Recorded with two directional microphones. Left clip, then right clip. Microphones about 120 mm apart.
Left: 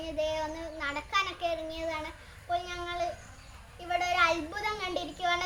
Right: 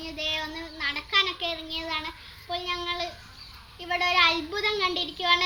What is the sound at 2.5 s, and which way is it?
A child's voice, 35° left (ahead or behind).